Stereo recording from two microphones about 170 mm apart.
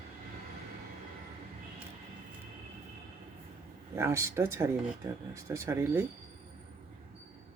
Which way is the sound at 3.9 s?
15° right (ahead or behind).